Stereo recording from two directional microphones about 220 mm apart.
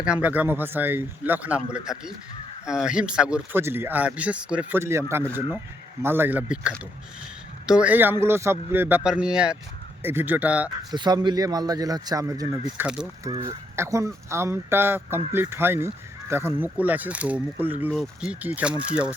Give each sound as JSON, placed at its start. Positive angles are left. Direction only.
{"t": 0.0, "sound": "speech", "side_deg": -5}
{"t": 10.9, "sound": "speech", "side_deg": -20}